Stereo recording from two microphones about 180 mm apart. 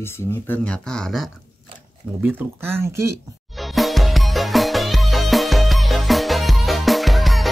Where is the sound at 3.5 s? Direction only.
Centre (ahead or behind).